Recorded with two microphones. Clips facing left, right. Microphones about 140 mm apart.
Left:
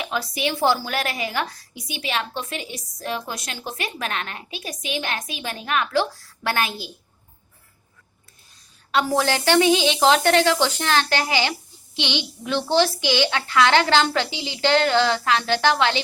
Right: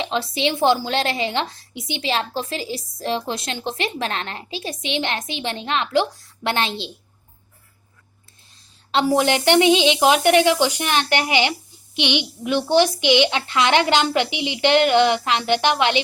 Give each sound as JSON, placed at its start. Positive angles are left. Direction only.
{"t": 0.0, "sound": "a woman's voice", "side_deg": -25}
{"t": 9.0, "sound": "a woman's voice", "side_deg": -20}